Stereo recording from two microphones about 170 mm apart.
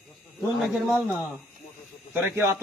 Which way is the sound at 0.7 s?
Centre (ahead or behind).